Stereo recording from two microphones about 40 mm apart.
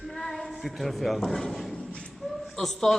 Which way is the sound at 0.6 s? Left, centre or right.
Centre.